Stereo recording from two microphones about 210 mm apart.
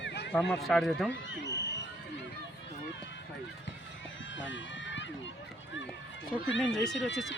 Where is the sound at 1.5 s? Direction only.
55° left (ahead or behind).